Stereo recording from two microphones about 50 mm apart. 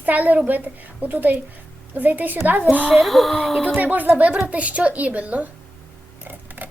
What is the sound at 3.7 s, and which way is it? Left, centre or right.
A woman's voice, right.